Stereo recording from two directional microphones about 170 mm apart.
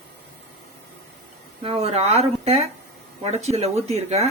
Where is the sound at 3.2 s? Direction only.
40° right (ahead or behind).